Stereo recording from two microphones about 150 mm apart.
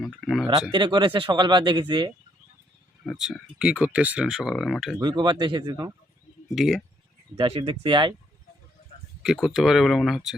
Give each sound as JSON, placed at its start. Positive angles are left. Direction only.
{"t": 0.0, "sound": "speech", "side_deg": 0}
{"t": 0.7, "sound": "speech", "side_deg": -30}
{"t": 3.0, "sound": "speech", "side_deg": 0}
{"t": 4.9, "sound": "speech", "side_deg": -30}
{"t": 6.5, "sound": "speech", "side_deg": 0}
{"t": 7.3, "sound": "speech", "side_deg": -40}
{"t": 9.2, "sound": "speech", "side_deg": -5}